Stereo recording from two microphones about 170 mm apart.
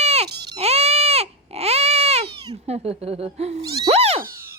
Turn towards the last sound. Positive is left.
turn(degrees=-35)  # may be behind; listen again after turning